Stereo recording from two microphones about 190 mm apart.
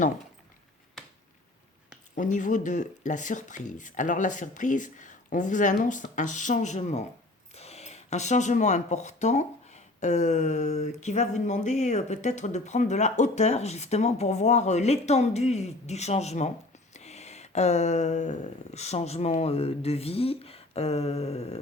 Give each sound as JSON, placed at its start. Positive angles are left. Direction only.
{"t": 2.1, "sound": "speech", "side_deg": 40}